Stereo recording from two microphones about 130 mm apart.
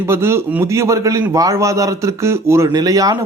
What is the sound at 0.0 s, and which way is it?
A man's voice, 20° right (ahead or behind).